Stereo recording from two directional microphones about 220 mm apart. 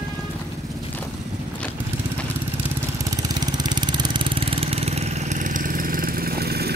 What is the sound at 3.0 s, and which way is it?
Vehicle, 15° right (ahead or behind).